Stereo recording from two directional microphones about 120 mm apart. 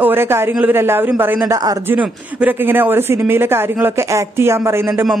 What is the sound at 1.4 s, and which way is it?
Speech, 30° right (ahead or behind).